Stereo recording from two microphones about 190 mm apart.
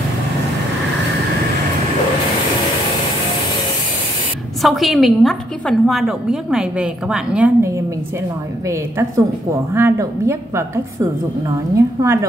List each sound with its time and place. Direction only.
4.6 s a woman's voice: centre (ahead or behind)
11.7 s a woman's voice: 15° right (ahead or behind)